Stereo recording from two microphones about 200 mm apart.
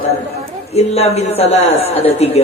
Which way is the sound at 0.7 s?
30° left (ahead or behind).